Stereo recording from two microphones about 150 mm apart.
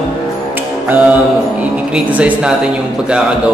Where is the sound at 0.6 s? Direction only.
10° right (ahead or behind).